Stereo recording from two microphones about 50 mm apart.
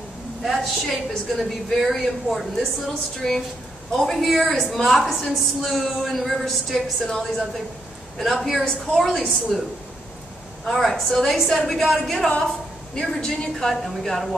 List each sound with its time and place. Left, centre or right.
0.4 s a woman's voice: centre
10.7 s a woman's voice: centre
12.4 s a woman's voice: centre